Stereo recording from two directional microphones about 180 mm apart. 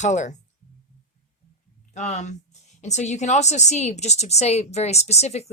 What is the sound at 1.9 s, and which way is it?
A woman's voice, 40° left (ahead or behind).